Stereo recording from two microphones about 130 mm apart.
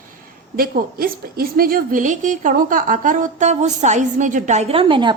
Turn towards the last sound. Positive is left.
turn(degrees=-40)  # may be behind; listen again after turning